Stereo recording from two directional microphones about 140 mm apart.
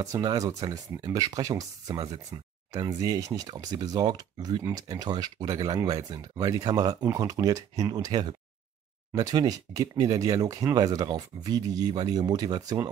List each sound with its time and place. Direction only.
0.0 s speech: 25° right (ahead or behind)